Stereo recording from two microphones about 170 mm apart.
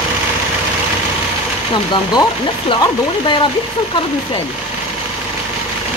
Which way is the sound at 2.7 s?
25° left (ahead or behind).